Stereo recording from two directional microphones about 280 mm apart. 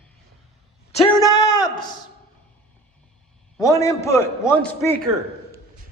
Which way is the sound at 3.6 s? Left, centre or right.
Centre.